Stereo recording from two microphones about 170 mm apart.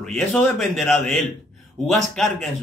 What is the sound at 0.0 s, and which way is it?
Speech, 5° left (ahead or behind).